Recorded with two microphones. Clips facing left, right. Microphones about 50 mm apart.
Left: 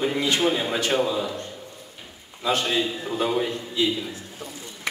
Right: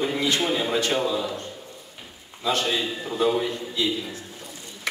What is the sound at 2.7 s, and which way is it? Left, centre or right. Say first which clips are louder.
A man's voice: left 1 dB; centre.